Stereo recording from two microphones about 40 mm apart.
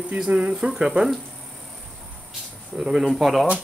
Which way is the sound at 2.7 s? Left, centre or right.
Centre.